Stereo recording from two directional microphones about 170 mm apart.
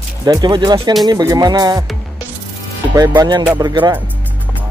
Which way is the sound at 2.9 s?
20° right (ahead or behind).